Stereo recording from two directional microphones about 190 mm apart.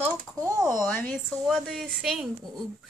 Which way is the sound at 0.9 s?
5° left (ahead or behind).